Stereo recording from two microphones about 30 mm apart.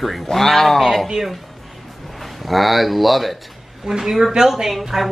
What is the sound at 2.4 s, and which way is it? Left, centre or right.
Speech, centre.